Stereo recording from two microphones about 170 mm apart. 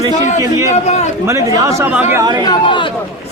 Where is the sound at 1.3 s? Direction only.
20° right (ahead or behind).